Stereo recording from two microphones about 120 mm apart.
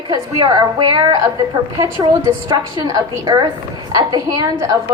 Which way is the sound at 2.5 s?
30° right (ahead or behind).